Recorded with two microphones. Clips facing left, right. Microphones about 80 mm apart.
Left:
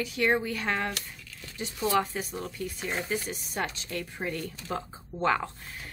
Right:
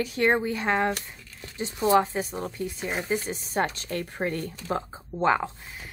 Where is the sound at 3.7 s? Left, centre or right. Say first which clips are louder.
Right 4 dB; right.